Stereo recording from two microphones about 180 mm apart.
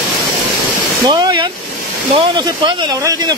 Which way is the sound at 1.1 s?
25° right (ahead or behind).